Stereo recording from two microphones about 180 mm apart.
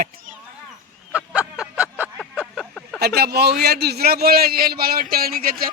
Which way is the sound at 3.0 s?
60° right (ahead or behind).